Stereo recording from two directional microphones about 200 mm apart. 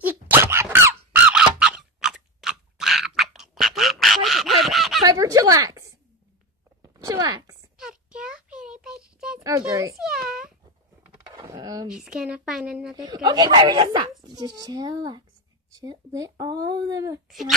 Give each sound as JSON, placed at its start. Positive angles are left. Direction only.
{"t": 0.0, "sound": "squeak", "side_deg": -10}
{"t": 5.0, "sound": "a sound", "side_deg": -15}
{"t": 7.7, "sound": "a sound", "side_deg": -5}
{"t": 9.4, "sound": "speech", "side_deg": -15}
{"t": 10.2, "sound": "cat", "side_deg": -5}
{"t": 11.2, "sound": "a sound", "side_deg": -20}
{"t": 11.9, "sound": "speech", "side_deg": -5}
{"t": 12.9, "sound": "speech", "side_deg": -20}
{"t": 17.3, "sound": "speech", "side_deg": 0}